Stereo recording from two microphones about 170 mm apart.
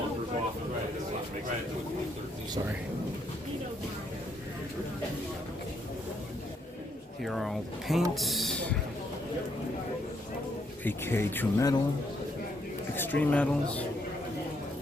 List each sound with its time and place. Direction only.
7.2 s speech: centre (ahead or behind)
10.8 s speech: 15° left (ahead or behind)
12.9 s speech: 10° left (ahead or behind)